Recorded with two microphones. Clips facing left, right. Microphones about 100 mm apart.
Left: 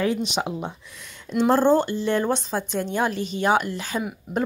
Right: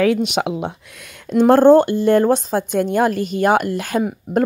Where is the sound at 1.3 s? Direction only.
50° right (ahead or behind).